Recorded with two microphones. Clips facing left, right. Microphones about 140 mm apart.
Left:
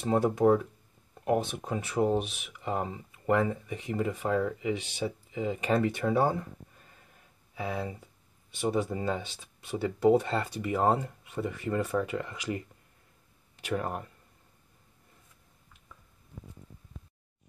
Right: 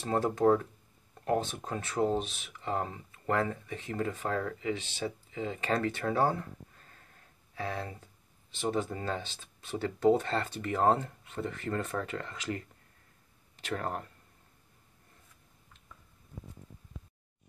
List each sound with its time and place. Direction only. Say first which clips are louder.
0.0 s speech: left 2 dB; 15° left (ahead or behind)
7.5 s speech: left 3 dB; 10° left (ahead or behind)